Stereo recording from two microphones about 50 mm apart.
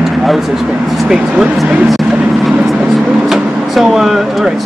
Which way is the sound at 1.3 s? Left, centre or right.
Right.